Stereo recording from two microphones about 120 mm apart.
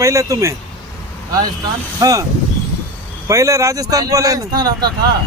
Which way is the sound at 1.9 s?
30° right (ahead or behind).